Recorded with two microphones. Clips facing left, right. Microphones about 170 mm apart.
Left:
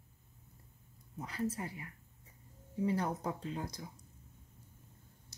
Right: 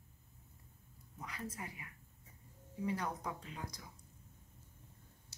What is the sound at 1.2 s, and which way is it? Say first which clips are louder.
Speech: left 8 dB; 30° left (ahead or behind).